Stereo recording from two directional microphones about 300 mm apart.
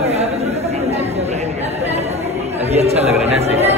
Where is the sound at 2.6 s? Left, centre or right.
Right.